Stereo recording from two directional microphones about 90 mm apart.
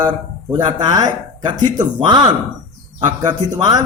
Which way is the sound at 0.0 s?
25° right (ahead or behind).